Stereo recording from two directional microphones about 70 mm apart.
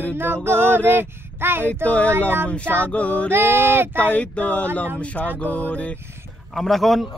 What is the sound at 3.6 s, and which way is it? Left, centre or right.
Mantra, right.